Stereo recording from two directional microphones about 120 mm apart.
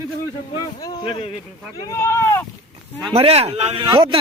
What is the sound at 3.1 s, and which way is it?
Speech, 55° right (ahead or behind).